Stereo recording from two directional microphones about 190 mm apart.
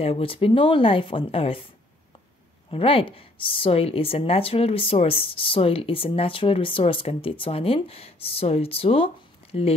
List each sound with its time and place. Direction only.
0.0 s a woman's voice: 30° left (ahead or behind)
2.7 s a woman's voice: 30° left (ahead or behind)